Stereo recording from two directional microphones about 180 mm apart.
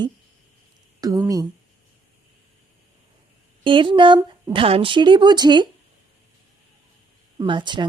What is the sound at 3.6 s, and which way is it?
Speech, 30° right (ahead or behind).